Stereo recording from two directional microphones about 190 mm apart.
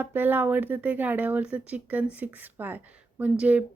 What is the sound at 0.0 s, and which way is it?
A woman's voice, 10° right (ahead or behind).